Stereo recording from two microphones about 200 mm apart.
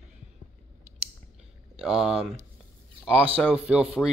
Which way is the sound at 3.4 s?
5° right (ahead or behind).